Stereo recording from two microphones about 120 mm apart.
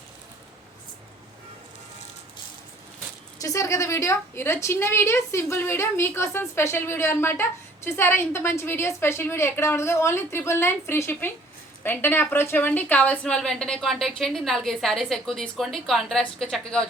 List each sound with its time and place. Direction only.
3.4 s a woman's voice: 30° left (ahead or behind); by 16.8 s centre (ahead or behind)